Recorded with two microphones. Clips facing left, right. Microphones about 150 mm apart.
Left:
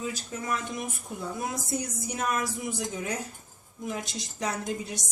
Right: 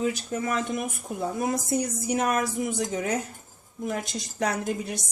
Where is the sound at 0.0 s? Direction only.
65° right (ahead or behind).